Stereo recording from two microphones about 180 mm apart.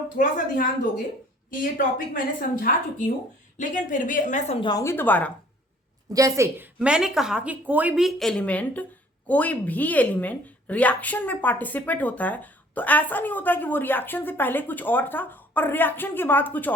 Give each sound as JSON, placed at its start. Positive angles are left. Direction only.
{"t": 0.2, "sound": "a woman's voice", "side_deg": 50}
{"t": 4.6, "sound": "a woman's voice", "side_deg": 20}
{"t": 6.1, "sound": "a woman's voice", "side_deg": -15}